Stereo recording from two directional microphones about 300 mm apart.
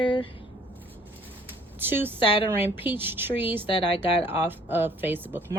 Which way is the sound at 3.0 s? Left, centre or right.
Centre.